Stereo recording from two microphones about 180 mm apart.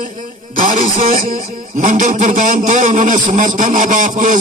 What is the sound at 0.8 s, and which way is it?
A man's voice, 35° right (ahead or behind).